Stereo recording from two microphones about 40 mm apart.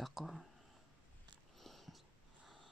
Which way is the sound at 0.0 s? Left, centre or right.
Centre.